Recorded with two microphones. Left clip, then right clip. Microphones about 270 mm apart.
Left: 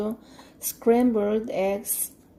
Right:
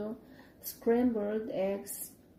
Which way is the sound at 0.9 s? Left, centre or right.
Left.